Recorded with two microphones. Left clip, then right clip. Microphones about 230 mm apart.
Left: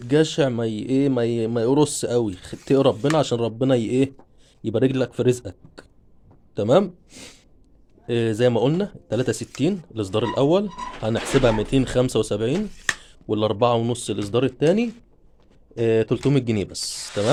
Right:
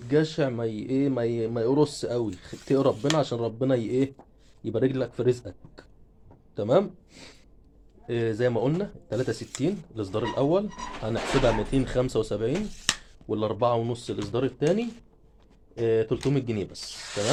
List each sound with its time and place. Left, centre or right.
0.1 s speech: left